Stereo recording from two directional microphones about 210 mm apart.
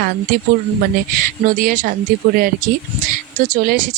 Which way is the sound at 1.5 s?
40° right (ahead or behind).